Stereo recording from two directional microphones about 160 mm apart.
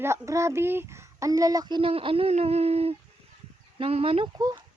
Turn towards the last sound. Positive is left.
turn(degrees=-25)  # may be behind; listen again after turning